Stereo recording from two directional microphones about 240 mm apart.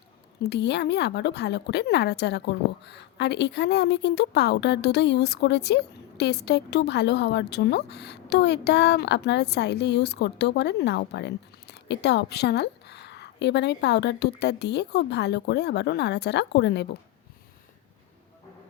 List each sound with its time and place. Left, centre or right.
0.4 s a woman's voice: left